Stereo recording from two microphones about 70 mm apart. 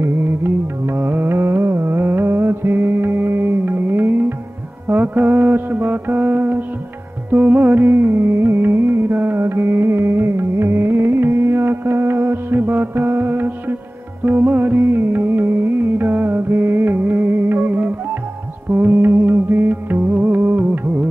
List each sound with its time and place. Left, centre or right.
0.0 s music: right
4.8 s mantra: right
7.2 s music: right